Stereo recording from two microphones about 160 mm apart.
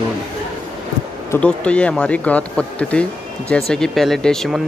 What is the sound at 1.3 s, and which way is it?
Speech, 10° left (ahead or behind).